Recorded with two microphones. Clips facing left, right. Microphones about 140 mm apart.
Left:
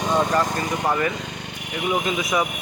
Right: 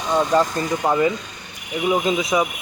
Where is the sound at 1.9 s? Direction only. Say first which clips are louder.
Right 4 dB; 25° right (ahead or behind).